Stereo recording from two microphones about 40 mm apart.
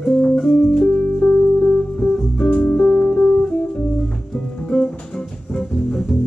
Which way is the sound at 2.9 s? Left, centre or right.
Centre.